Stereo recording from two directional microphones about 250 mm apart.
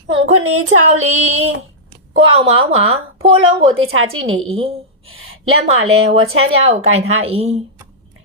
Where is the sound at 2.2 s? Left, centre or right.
Right.